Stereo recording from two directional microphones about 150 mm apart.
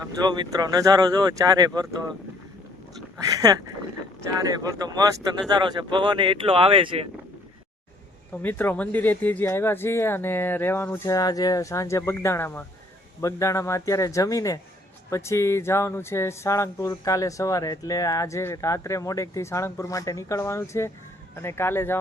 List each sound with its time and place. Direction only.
0.2 s speech: 30° right (ahead or behind)
3.2 s speech: 25° right (ahead or behind)
8.3 s speech: 10° left (ahead or behind)